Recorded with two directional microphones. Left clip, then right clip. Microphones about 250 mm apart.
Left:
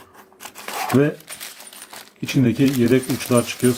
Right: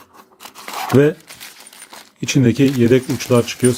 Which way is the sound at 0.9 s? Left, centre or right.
Right.